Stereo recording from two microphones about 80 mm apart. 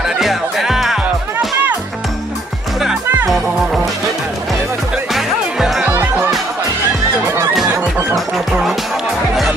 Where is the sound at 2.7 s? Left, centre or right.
Centre.